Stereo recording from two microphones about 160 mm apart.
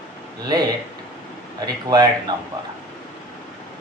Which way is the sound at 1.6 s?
25° right (ahead or behind).